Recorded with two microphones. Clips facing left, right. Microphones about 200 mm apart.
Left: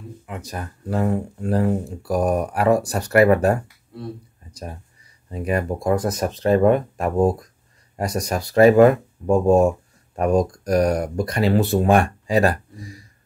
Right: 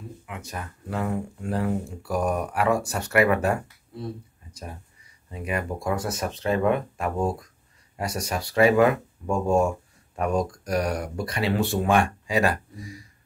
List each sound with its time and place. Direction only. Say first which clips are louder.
0.3 s speech: left 5 dB; 40° left (ahead or behind)
5.3 s speech: left 6 dB; 40° left (ahead or behind)